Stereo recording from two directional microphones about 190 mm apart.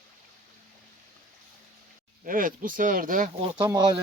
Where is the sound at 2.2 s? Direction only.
45° right (ahead or behind).